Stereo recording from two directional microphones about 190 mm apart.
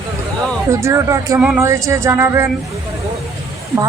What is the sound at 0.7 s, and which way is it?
Speech, 15° right (ahead or behind).